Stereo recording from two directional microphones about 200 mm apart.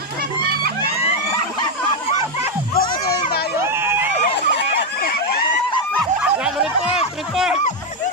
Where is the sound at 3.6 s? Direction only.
10° right (ahead or behind).